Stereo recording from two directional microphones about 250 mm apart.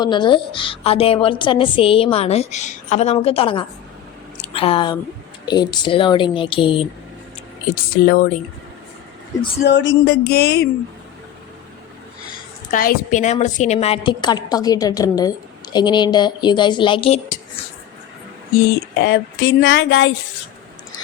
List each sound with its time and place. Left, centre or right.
0.0 s a woman's voice: centre
7.9 s speech: left
9.6 s speech: left
12.7 s a woman's voice: left
18.9 s speech: left